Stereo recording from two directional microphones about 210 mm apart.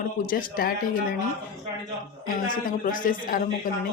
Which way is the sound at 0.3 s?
45° left (ahead or behind).